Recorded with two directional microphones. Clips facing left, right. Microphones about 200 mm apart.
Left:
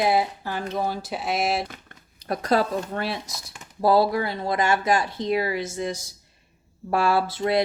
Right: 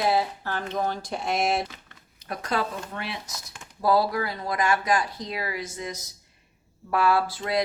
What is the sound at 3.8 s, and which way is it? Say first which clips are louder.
Speech: left 3 dB; 25° left (ahead or behind).